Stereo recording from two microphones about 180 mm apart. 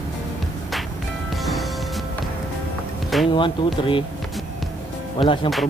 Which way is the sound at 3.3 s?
25° left (ahead or behind).